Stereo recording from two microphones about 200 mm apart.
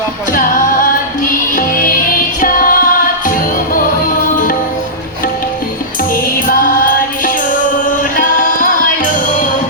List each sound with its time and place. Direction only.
0.3 s a capella: 45° left (ahead or behind)
1.5 s music: 45° left (ahead or behind)
6.2 s music: 45° left (ahead or behind)